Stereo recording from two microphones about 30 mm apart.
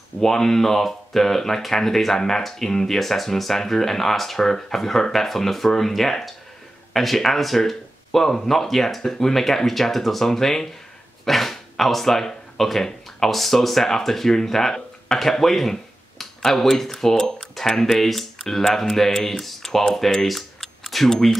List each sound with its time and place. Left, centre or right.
0.2 s speech: centre
20.0 s speech: centre
20.2 s a sound: centre